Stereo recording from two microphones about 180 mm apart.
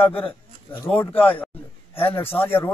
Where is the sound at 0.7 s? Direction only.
10° left (ahead or behind).